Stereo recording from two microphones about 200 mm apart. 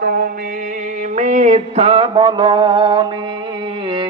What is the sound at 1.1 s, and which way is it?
Music, 40° right (ahead or behind).